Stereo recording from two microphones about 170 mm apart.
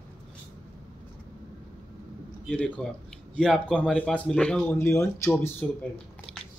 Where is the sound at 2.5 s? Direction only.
5° left (ahead or behind).